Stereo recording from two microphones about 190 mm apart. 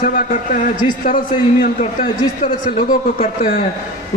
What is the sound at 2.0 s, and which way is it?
A man's voice, 40° left (ahead or behind).